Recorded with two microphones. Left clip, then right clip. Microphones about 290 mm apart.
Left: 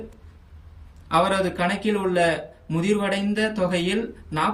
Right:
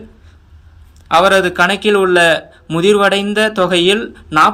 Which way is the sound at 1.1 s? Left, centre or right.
Centre.